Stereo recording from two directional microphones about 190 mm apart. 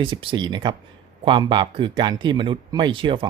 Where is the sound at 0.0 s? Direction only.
25° right (ahead or behind).